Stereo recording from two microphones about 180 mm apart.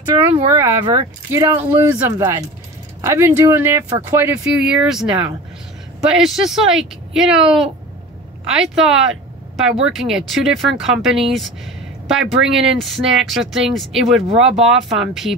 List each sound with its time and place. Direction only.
0.0 s speech: 15° right (ahead or behind)
4.5 s speech: 5° right (ahead or behind)
6.1 s speech: centre (ahead or behind)